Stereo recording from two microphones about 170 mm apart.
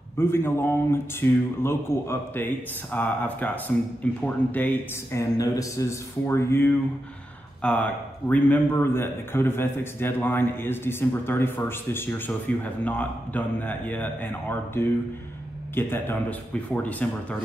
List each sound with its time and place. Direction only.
0.2 s a man's voice: 15° left (ahead or behind)